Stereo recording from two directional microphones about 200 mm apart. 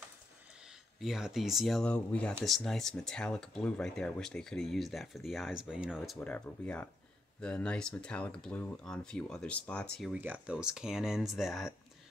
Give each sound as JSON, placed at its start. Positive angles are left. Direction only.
{"t": 0.9, "sound": "speech", "side_deg": 0}